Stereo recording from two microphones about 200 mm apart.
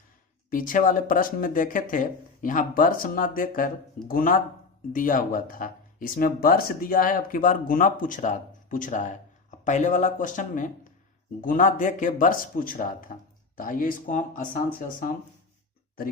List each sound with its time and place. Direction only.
0.5 s speech: 40° left (ahead or behind)